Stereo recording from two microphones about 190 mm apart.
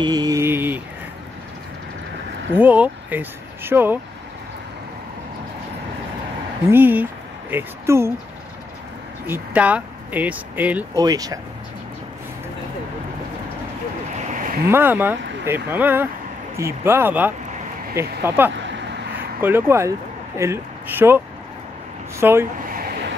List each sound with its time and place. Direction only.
0.0 s mantra: 20° right (ahead or behind)
2.5 s speech: 10° right (ahead or behind)
6.7 s speech: 10° right (ahead or behind)
9.3 s speech: 10° right (ahead or behind)
11.0 s speech: 20° right (ahead or behind)
14.7 s speech: 10° right (ahead or behind)
22.2 s speech: 10° right (ahead or behind)
22.7 s a sound: 50° right (ahead or behind)